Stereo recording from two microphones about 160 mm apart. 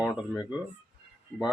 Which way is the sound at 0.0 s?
5° right (ahead or behind).